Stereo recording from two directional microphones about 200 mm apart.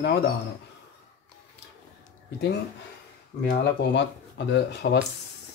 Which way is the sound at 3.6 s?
60° left (ahead or behind).